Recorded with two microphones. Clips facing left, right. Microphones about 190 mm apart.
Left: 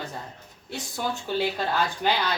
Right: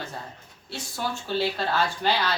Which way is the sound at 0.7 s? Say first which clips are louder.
Left 1 dB; 15° left (ahead or behind).